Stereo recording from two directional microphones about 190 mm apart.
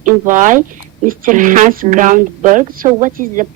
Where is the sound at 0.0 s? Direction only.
45° right (ahead or behind).